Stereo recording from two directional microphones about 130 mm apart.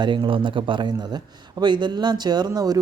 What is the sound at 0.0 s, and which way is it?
Speech, 35° right (ahead or behind).